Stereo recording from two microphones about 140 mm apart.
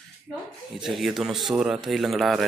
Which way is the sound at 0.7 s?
Centre (ahead or behind).